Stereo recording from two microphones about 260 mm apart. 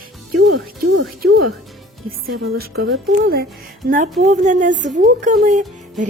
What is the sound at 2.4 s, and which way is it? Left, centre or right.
A woman's voice, right.